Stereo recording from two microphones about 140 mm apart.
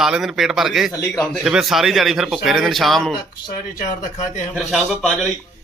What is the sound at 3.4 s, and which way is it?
Speech, 80° left.